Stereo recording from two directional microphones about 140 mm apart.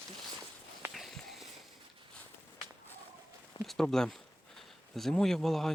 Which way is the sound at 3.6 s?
Centre (ahead or behind).